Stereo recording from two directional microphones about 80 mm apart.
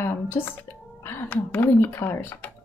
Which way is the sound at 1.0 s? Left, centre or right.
Left.